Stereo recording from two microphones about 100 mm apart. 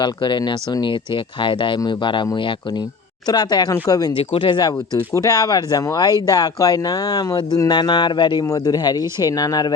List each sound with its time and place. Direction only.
0.0 s speech: 50° left (ahead or behind)
3.2 s speech: 45° left (ahead or behind)
4.1 s speech: 60° left (ahead or behind)
5.1 s speech: 35° left (ahead or behind)
8.4 s speech: 35° left (ahead or behind)